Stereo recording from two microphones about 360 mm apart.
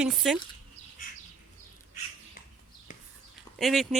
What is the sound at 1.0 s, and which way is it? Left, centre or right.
Bird, left.